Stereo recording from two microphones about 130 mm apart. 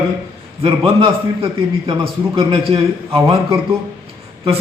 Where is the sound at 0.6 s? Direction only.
45° right (ahead or behind).